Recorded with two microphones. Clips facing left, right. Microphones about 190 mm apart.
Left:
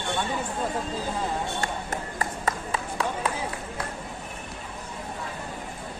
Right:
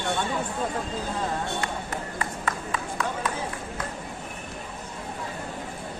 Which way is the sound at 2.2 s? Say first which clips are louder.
Left 3 dB; 35° left (ahead or behind).